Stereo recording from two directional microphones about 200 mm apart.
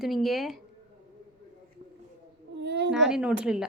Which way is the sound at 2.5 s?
60° right (ahead or behind).